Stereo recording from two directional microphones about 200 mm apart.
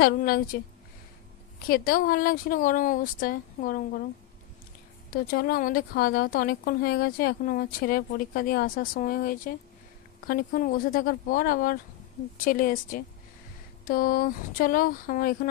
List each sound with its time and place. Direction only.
0.0 s speech: 50° left (ahead or behind)
1.7 s speech: 45° left (ahead or behind)
5.1 s speech: 50° left (ahead or behind)